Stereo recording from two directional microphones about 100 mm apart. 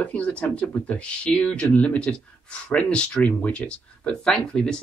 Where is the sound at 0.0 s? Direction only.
15° left (ahead or behind).